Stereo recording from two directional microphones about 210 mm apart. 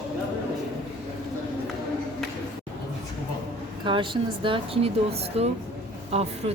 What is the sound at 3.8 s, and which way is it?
Speech, 25° right (ahead or behind).